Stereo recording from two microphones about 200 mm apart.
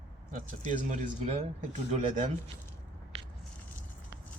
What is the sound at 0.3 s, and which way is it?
Speech, 40° right (ahead or behind).